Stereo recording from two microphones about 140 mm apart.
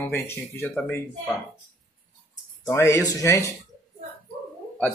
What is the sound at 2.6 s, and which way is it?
Speech, 20° left (ahead or behind).